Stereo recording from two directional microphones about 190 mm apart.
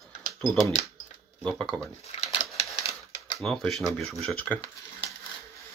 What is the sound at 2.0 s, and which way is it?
Typewriter, 35° left (ahead or behind).